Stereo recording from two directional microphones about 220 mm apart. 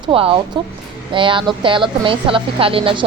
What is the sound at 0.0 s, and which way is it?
A woman's voice, 25° right (ahead or behind).